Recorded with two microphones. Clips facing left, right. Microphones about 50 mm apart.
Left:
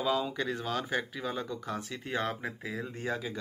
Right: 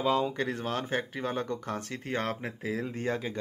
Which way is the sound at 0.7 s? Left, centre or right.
Right.